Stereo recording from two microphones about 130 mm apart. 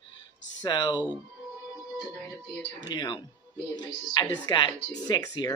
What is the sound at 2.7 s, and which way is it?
Speech, 35° left (ahead or behind).